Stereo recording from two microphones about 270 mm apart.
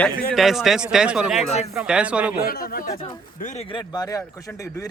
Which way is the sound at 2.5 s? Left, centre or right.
Left.